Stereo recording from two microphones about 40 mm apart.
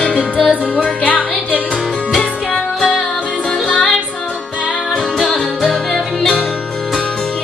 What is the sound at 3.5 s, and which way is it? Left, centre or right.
Music, centre.